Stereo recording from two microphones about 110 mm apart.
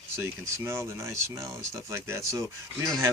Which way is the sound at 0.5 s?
25° right (ahead or behind).